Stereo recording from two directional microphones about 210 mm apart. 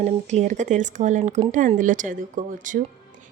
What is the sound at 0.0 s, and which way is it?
Speech, 35° right (ahead or behind).